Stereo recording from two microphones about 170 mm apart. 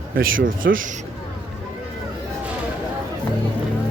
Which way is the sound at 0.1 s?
60° right (ahead or behind).